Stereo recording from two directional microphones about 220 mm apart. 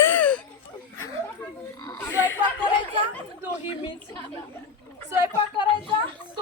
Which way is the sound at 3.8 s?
20° left (ahead or behind).